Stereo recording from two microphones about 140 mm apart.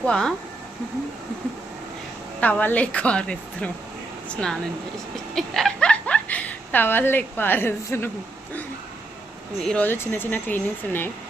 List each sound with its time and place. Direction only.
0.0 s speech: 5° left (ahead or behind)
2.4 s speech: 10° left (ahead or behind)
9.6 s speech: 5° left (ahead or behind)